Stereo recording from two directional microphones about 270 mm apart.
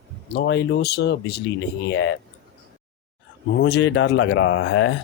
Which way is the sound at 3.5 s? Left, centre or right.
Left.